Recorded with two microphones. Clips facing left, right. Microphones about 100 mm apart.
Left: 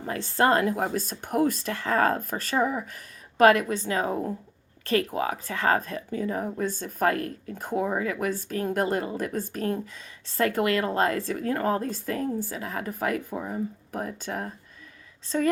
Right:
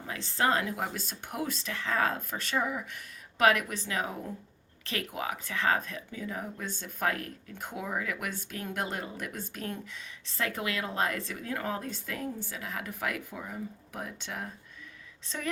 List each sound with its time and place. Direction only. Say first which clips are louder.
0.0 s a woman's voice: left 6 dB; 45° left (ahead or behind)